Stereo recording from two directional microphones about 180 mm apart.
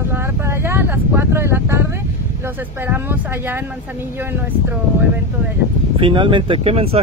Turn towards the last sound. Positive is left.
turn(degrees=-35)  # may be behind; listen again after turning